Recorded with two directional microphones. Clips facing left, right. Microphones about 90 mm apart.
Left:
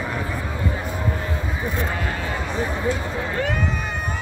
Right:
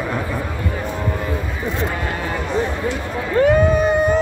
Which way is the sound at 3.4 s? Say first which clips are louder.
Right 14 dB; 40° right (ahead or behind).